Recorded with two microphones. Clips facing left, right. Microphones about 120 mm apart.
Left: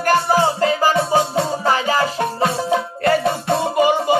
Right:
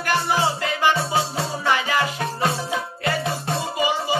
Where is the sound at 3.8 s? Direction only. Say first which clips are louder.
Left 7 dB; 55° left (ahead or behind).